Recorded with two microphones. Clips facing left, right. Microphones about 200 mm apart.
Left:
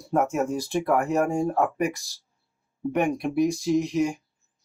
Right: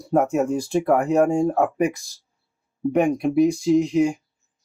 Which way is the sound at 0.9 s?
50° right (ahead or behind).